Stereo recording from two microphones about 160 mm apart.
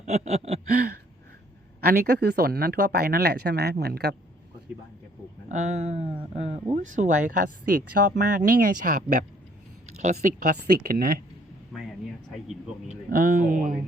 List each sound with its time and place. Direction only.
0.0 s a sound: 45° right (ahead or behind)
1.8 s speech: 75° right (ahead or behind)
5.5 s speech: 45° right (ahead or behind)
6.7 s speech: 50° right (ahead or behind)
10.8 s speech: 65° right (ahead or behind)
11.7 s a sound: centre (ahead or behind)
13.1 s speech: 60° right (ahead or behind)